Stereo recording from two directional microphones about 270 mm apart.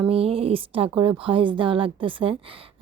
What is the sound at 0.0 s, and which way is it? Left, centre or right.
A woman's voice, right.